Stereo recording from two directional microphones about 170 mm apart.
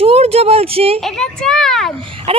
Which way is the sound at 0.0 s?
35° right (ahead or behind).